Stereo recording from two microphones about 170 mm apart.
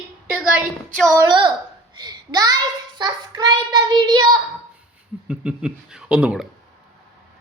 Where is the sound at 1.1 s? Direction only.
15° right (ahead or behind).